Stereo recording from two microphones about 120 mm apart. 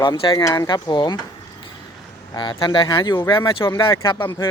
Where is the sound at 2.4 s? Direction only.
40° left (ahead or behind).